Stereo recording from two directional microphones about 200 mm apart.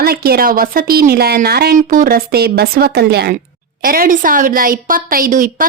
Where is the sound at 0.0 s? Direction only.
50° right (ahead or behind).